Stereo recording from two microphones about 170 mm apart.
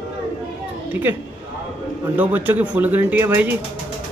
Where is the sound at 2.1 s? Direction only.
10° right (ahead or behind).